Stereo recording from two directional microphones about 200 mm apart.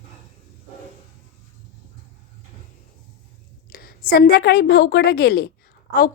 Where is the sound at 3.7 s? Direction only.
45° left (ahead or behind).